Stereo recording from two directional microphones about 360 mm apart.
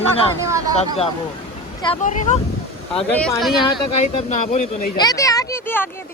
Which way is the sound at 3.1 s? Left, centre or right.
Centre.